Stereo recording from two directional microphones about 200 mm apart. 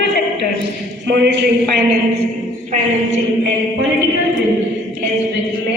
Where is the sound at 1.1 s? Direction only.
55° right (ahead or behind).